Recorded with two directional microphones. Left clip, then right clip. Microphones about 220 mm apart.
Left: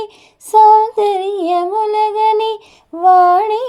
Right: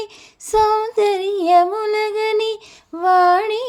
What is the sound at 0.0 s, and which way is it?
Female singing, 50° right (ahead or behind).